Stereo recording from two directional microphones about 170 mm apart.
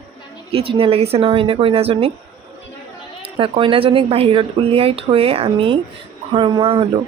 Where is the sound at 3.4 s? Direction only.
30° right (ahead or behind).